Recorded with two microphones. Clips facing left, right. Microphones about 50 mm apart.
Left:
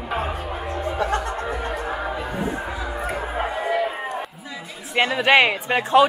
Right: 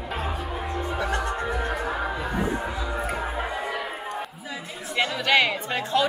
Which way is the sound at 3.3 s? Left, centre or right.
Centre.